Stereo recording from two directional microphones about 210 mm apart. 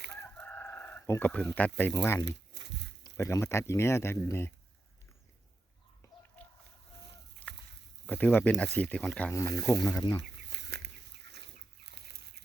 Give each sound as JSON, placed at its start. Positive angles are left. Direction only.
{"t": 0.2, "sound": "chicken", "side_deg": 10}
{"t": 2.2, "sound": "a sound", "side_deg": -55}
{"t": 3.0, "sound": "speech", "side_deg": 15}
{"t": 7.4, "sound": "a sound", "side_deg": 5}
{"t": 8.0, "sound": "speech", "side_deg": 10}
{"t": 10.5, "sound": "chicken", "side_deg": -50}